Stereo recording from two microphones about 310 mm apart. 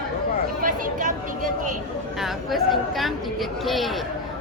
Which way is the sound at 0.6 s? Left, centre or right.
Right.